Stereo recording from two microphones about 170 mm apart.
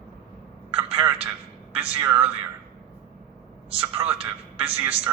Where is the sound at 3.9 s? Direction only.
10° right (ahead or behind).